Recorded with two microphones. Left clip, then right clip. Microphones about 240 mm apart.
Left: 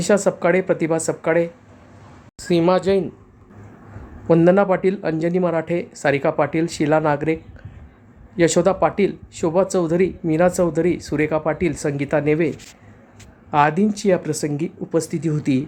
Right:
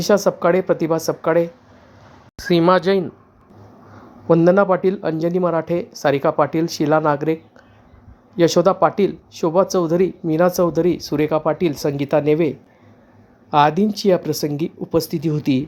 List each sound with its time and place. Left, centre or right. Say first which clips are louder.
0.0 s speech: right 2 dB; centre
4.3 s speech: right 1 dB; centre
8.4 s speech: right 2 dB; centre